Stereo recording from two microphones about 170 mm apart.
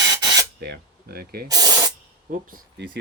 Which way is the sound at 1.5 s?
20° right (ahead or behind).